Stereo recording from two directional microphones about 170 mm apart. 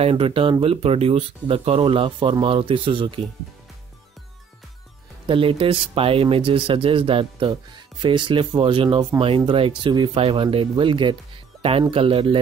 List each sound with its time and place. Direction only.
0.0 s speech: 30° right (ahead or behind)
5.2 s speech: 30° right (ahead or behind)